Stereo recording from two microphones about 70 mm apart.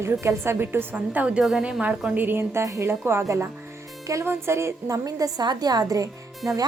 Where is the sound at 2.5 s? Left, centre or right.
Right.